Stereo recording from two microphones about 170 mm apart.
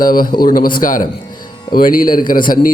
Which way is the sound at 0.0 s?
55° left (ahead or behind).